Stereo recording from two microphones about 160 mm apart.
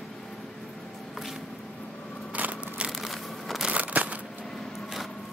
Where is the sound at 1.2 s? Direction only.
Centre (ahead or behind).